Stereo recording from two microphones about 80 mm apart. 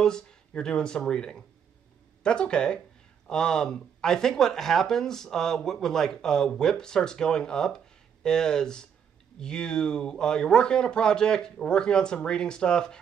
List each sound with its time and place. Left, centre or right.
0.0 s speech: centre